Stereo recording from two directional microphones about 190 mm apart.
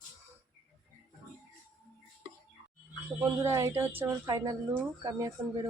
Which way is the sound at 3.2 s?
15° right (ahead or behind).